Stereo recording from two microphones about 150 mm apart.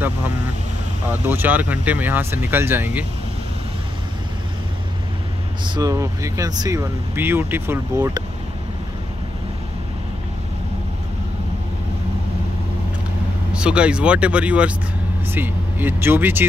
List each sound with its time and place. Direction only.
1.2 s speech: 15° right (ahead or behind)
5.8 s speech: 20° right (ahead or behind)
13.5 s speech: 5° right (ahead or behind)